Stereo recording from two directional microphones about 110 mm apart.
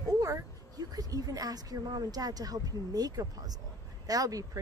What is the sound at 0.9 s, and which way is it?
Speech, 35° right (ahead or behind).